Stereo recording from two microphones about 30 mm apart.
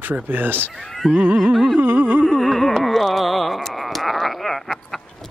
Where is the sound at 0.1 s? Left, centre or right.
Right.